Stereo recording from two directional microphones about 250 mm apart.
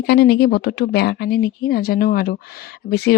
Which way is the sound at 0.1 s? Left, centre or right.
Left.